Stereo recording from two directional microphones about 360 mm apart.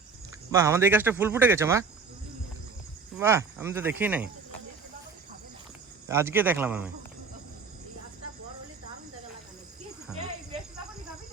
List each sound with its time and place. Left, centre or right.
0.5 s speech: centre
3.2 s speech: centre
6.1 s speech: centre